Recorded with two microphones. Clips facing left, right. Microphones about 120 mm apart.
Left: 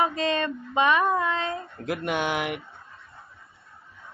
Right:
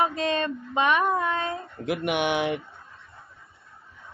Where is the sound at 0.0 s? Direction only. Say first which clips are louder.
Even; 15° right (ahead or behind).